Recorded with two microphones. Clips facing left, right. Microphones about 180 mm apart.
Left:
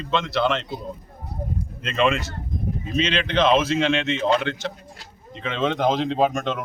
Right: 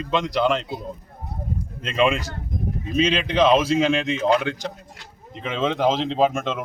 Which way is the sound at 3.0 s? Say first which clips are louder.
Right 2 dB; 10° right (ahead or behind).